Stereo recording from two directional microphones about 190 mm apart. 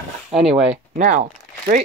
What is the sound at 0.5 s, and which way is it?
Speech, 35° right (ahead or behind).